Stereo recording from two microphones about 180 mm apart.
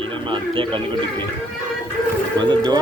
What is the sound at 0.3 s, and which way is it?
Speech, 25° right (ahead or behind).